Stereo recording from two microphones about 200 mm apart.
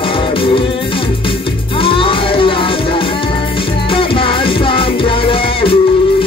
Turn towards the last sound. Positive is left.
turn(degrees=25)  # may be behind; listen again after turning